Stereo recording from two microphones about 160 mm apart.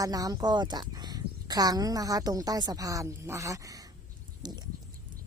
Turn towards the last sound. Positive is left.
turn(degrees=-25)  # may be behind; listen again after turning